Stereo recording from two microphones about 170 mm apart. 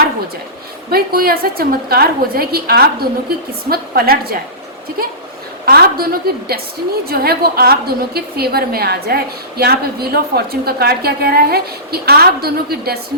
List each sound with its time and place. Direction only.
0.9 s a woman's voice: 60° right (ahead or behind)
5.6 s a woman's voice: 60° right (ahead or behind)